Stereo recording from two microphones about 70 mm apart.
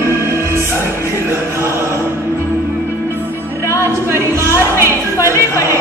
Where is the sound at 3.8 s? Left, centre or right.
Right.